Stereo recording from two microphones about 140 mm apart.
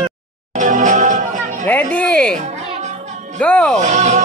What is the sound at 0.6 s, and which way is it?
Music, 60° right (ahead or behind).